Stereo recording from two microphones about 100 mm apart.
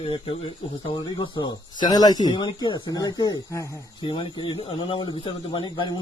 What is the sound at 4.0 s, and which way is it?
A man's voice, 55° left (ahead or behind).